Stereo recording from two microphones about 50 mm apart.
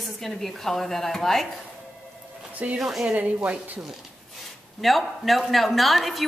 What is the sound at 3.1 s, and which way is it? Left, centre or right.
Speech, right.